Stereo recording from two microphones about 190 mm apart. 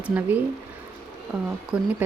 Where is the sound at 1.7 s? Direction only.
5° right (ahead or behind).